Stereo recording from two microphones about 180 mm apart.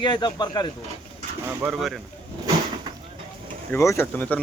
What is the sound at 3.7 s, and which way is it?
Speech, 15° left (ahead or behind).